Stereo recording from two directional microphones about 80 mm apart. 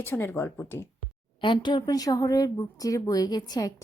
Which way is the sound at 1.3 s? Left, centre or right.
Left.